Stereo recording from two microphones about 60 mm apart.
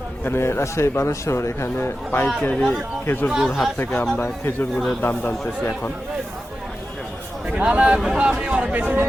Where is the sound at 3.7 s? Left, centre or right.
Left.